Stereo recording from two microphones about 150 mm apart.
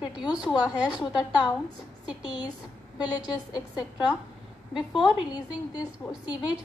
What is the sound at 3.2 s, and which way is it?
A woman's voice, 5° right (ahead or behind).